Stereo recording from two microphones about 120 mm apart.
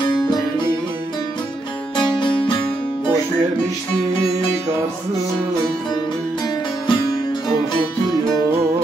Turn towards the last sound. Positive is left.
turn(degrees=40)  # may be behind; listen again after turning